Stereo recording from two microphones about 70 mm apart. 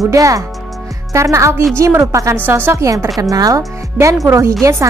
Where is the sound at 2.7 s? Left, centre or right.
Right.